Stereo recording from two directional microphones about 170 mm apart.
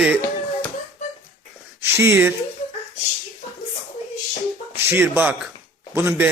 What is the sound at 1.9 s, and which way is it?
Speech, 15° right (ahead or behind).